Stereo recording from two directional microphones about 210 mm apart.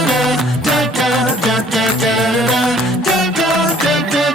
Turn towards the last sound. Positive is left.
turn(degrees=0)  # may be behind; listen again after turning